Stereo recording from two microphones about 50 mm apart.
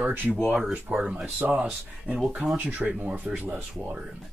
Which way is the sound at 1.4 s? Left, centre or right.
Right.